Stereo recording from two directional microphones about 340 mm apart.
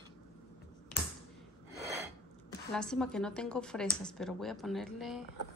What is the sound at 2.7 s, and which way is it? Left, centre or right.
A woman's voice, centre.